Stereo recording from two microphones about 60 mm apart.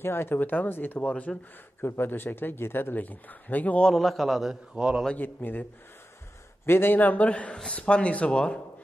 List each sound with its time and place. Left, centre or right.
0.0 s speech: left
1.8 s speech: left
3.8 s a man's voice: centre
4.7 s a man's voice: centre
5.1 s speech: left